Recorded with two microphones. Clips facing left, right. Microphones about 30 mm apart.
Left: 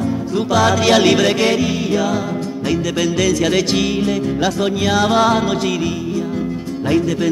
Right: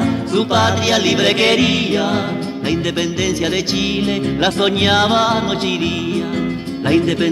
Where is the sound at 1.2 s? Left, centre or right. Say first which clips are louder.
Right 2 dB; right.